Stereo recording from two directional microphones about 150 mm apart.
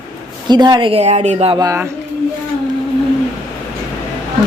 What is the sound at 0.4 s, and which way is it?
A woman's voice, 30° right (ahead or behind).